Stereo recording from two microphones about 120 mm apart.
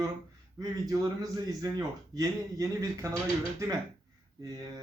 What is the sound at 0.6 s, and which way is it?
Speech, 30° right (ahead or behind).